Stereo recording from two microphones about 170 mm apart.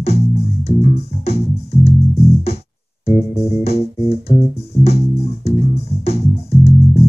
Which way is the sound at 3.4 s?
35° left (ahead or behind).